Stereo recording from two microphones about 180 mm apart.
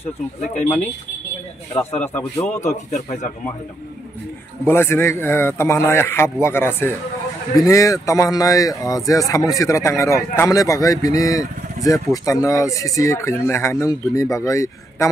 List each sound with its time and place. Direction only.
2.1 s speech: 10° left (ahead or behind)
2.6 s speech: 40° left (ahead or behind)
4.6 s speech: 15° left (ahead or behind)